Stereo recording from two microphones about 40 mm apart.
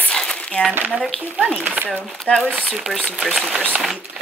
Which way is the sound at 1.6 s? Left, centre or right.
Right.